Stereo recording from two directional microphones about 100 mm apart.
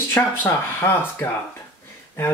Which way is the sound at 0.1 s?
20° left (ahead or behind).